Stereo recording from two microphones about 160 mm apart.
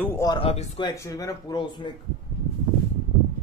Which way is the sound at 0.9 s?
20° left (ahead or behind).